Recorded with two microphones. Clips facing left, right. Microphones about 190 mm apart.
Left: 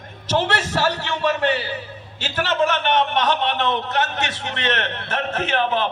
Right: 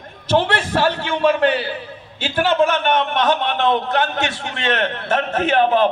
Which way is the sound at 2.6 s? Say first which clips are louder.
Left 2 dB; 45° right (ahead or behind).